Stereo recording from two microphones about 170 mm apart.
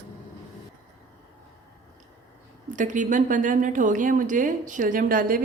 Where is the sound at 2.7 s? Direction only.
50° right (ahead or behind).